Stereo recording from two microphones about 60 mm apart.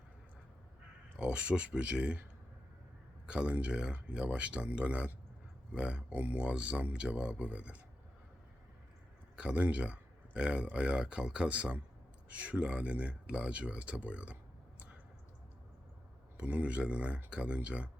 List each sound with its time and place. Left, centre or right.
1.1 s speech: centre
3.2 s speech: centre
9.3 s speech: centre
16.4 s speech: right